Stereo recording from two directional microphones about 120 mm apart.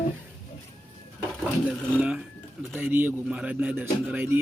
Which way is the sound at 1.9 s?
10° right (ahead or behind).